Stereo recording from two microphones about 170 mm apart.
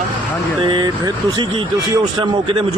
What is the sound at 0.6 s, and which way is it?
Speech, 25° right (ahead or behind).